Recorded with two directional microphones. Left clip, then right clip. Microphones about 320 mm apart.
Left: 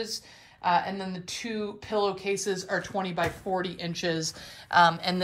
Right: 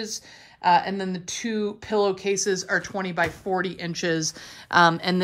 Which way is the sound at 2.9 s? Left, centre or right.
Centre.